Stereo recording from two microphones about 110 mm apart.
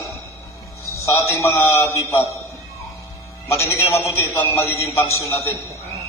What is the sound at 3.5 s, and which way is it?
A man's voice, 25° left (ahead or behind).